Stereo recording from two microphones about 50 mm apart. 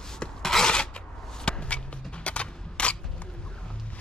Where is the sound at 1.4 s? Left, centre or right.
Left.